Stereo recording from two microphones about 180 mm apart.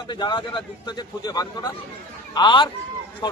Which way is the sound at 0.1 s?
25° left (ahead or behind).